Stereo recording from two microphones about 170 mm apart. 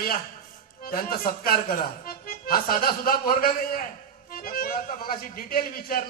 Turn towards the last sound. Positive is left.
turn(degrees=60)  # may be behind; listen again after turning